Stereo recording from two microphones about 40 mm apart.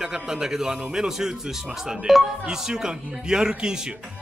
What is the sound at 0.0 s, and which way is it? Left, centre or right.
Speech, centre.